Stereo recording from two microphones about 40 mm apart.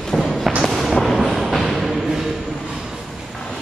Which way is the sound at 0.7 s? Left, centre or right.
Centre.